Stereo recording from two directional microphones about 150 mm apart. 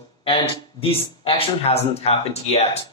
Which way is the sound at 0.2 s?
40° left (ahead or behind).